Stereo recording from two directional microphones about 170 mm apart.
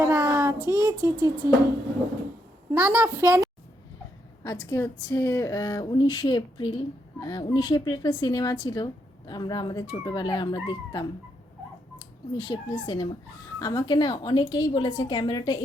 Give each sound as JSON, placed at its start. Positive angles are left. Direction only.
{"t": 0.0, "sound": "child singing", "side_deg": -15}
{"t": 0.7, "sound": "a woman's voice", "side_deg": -20}
{"t": 2.7, "sound": "a woman's voice", "side_deg": -10}
{"t": 4.4, "sound": "speech", "side_deg": 20}
{"t": 12.4, "sound": "speech", "side_deg": 25}